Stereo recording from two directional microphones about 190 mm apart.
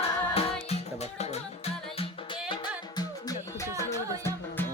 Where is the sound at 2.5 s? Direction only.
20° left (ahead or behind).